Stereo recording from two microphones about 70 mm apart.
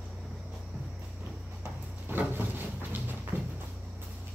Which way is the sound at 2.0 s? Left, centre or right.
Right.